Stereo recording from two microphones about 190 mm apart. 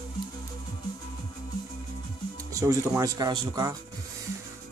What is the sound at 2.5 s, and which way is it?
Music, 20° right (ahead or behind).